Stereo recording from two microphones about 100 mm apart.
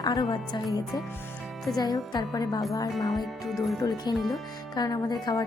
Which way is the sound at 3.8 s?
45° left (ahead or behind).